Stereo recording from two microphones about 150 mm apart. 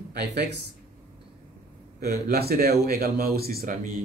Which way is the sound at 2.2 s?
80° right.